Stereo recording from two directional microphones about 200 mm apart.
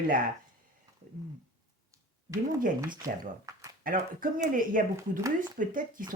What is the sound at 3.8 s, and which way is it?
Speech, 45° right (ahead or behind).